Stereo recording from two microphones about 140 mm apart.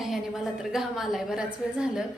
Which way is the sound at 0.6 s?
5° right (ahead or behind).